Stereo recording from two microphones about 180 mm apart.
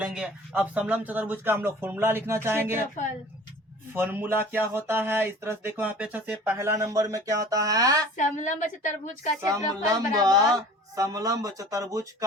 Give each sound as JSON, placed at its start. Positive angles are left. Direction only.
{"t": 0.0, "sound": "speech", "side_deg": -5}
{"t": 3.9, "sound": "speech", "side_deg": -10}
{"t": 8.1, "sound": "a woman's voice", "side_deg": 45}
{"t": 9.4, "sound": "a woman's voice", "side_deg": -20}